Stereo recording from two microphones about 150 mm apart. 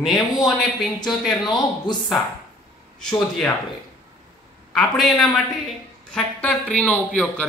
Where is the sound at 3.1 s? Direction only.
5° left (ahead or behind).